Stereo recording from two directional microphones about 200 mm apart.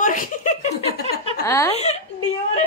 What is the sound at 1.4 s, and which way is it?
Speech, 15° left (ahead or behind).